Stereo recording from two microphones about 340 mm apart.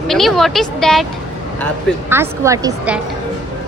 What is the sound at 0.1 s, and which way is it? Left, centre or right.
Speech, centre.